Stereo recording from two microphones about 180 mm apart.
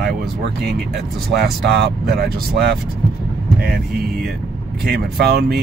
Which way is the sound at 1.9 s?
60° right (ahead or behind).